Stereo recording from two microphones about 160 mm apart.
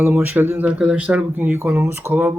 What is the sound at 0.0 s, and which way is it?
Speech, 10° right (ahead or behind).